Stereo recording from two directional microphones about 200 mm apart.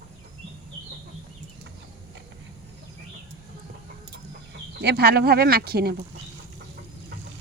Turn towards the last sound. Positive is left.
turn(degrees=-50)  # may be behind; listen again after turning